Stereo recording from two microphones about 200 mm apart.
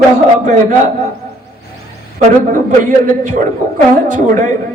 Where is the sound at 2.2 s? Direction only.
40° right (ahead or behind).